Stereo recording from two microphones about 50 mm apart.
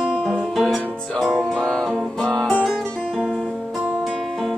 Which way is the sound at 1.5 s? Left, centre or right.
Centre.